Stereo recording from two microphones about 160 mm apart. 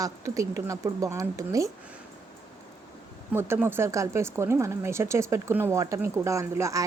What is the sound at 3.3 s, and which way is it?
Speech, 15° right (ahead or behind).